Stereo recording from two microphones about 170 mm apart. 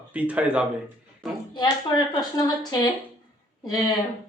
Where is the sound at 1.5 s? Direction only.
25° left (ahead or behind).